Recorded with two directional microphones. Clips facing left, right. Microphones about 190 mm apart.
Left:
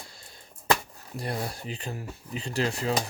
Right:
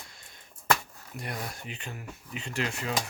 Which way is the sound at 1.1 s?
30° left (ahead or behind).